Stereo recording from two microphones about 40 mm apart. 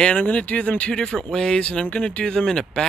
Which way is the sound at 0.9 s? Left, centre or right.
Centre.